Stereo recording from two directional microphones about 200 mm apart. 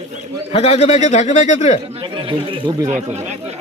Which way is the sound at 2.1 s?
25° right (ahead or behind).